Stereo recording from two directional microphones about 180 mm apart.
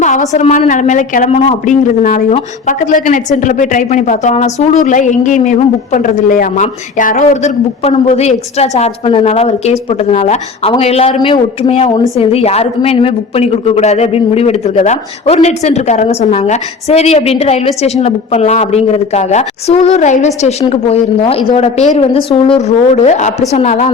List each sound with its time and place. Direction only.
0.0 s a woman's voice: 45° left (ahead or behind)